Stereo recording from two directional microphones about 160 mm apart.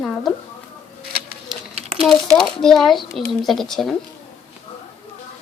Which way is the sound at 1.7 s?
40° right (ahead or behind).